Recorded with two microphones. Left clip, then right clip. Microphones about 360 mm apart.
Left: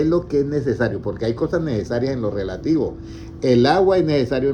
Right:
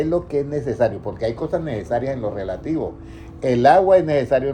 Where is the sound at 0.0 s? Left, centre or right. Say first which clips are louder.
Left 2 dB; centre.